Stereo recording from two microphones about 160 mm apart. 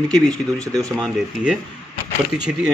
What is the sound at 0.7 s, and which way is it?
Speech, 5° left (ahead or behind).